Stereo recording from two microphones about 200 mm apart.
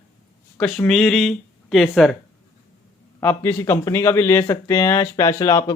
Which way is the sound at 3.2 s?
10° left (ahead or behind).